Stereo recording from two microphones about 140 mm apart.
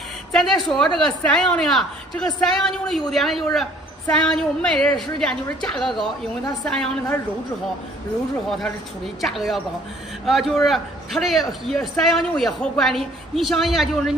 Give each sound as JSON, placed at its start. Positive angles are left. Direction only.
{"t": 0.3, "sound": "a woman's voice", "side_deg": 0}
{"t": 9.2, "sound": "a woman's voice", "side_deg": 0}